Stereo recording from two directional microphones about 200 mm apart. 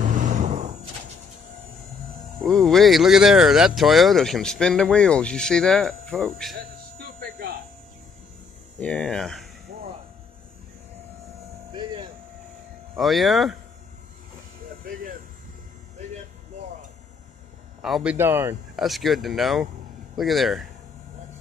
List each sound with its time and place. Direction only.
0.0 s vehicle: 40° right (ahead or behind)
2.4 s speech: centre (ahead or behind)
6.5 s music: 45° right (ahead or behind)
8.7 s speech: 5° left (ahead or behind)
11.7 s music: 20° right (ahead or behind)
12.9 s speech: centre (ahead or behind)
14.8 s a sound: 45° right (ahead or behind)
17.8 s speech: centre (ahead or behind)
18.1 s speech: 10° right (ahead or behind)
18.9 s speech: centre (ahead or behind)